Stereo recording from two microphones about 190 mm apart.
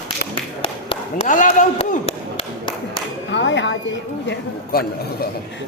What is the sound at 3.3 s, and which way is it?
A woman's voice, 70° left (ahead or behind).